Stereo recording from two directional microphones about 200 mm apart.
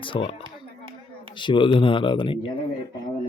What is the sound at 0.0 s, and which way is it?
Speech, 25° left (ahead or behind).